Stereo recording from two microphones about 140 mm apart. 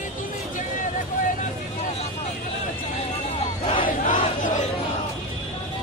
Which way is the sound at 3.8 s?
70° left (ahead or behind).